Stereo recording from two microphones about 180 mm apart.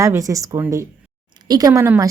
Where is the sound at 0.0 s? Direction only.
15° right (ahead or behind).